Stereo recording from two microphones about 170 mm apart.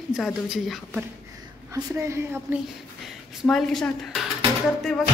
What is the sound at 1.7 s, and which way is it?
Speech, 20° right (ahead or behind).